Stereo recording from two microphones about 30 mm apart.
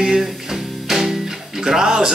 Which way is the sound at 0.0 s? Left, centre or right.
Centre.